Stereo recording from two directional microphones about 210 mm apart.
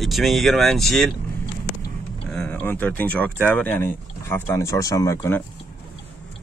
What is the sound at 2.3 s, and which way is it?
Speech, 10° left (ahead or behind).